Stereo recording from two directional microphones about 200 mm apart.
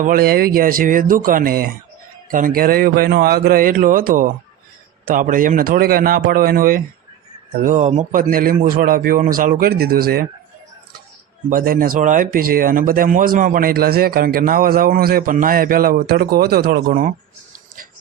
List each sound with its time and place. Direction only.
0.0 s speech: 45° right (ahead or behind)
11.4 s speech: 45° right (ahead or behind)